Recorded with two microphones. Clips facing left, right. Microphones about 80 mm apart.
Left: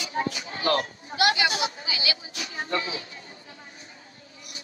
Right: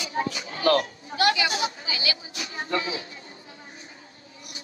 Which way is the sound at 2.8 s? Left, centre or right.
Right.